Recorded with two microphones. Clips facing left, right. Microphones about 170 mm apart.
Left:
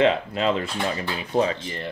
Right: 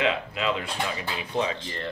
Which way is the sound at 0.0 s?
40° left (ahead or behind).